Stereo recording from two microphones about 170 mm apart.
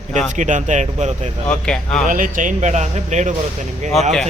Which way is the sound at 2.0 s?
50° right (ahead or behind).